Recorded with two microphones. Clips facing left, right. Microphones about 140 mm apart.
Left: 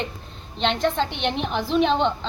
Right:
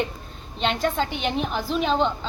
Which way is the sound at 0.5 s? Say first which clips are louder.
Left 1 dB; 5° right (ahead or behind).